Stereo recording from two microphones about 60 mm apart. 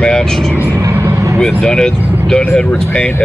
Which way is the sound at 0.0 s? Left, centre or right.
Centre.